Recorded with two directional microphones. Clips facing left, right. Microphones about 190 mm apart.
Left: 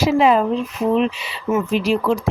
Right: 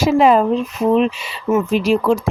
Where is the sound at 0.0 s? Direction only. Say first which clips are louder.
Right 2 dB; 45° right (ahead or behind).